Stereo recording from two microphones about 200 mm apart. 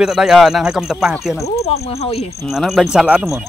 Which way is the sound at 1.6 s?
30° left (ahead or behind).